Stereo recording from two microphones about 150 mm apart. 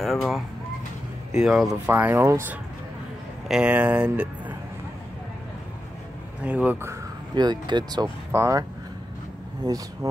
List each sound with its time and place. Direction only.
0.0 s speech: centre (ahead or behind)
1.4 s speech: centre (ahead or behind)
1.9 s speech: 10° right (ahead or behind)
3.4 s speech: 5° right (ahead or behind)
6.4 s speech: 10° right (ahead or behind)
7.3 s speech: 30° right (ahead or behind)
9.6 s speech: 25° right (ahead or behind)